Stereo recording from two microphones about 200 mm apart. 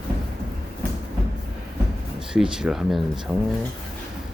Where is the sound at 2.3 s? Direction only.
5° right (ahead or behind).